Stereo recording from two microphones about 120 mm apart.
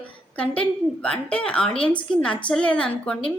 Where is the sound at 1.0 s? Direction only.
5° left (ahead or behind).